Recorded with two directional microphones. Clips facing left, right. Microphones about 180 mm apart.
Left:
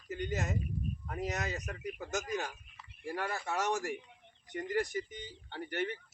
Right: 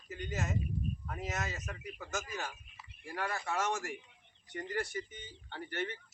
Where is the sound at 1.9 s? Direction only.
15° left (ahead or behind).